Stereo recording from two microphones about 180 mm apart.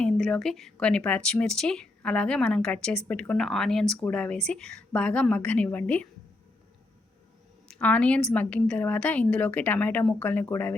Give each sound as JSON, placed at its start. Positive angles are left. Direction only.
{"t": 0.0, "sound": "a woman's voice", "side_deg": 0}
{"t": 7.7, "sound": "a woman's voice", "side_deg": 5}